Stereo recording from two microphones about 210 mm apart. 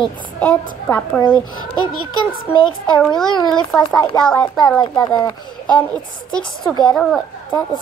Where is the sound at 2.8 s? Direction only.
5° left (ahead or behind).